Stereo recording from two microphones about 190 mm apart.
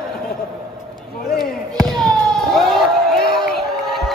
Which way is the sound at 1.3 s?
Centre (ahead or behind).